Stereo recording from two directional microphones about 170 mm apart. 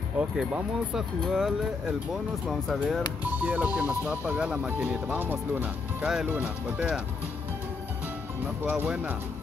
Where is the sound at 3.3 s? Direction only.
10° right (ahead or behind).